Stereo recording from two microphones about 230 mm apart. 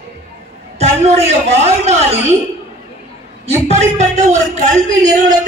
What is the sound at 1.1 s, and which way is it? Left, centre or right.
Speech, right.